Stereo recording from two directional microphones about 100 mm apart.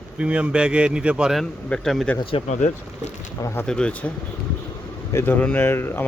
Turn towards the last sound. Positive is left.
turn(degrees=25)  # may be behind; listen again after turning